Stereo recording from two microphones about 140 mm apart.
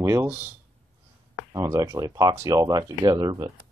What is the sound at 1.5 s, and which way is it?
Speech, 25° right (ahead or behind).